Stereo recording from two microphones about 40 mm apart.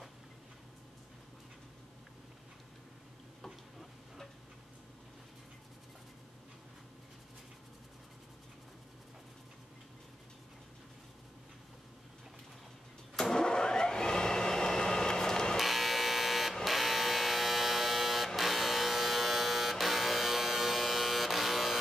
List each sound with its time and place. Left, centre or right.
13.1 s vehicle: centre
15.5 s a sound: centre
16.6 s electric shaver: centre